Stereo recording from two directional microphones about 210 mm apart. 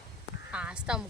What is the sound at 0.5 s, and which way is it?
Speech, 5° right (ahead or behind).